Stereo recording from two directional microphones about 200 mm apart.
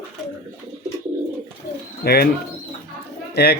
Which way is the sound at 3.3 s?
55° left (ahead or behind).